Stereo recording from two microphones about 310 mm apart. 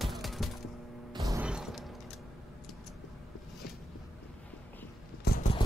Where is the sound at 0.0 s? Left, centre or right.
Centre.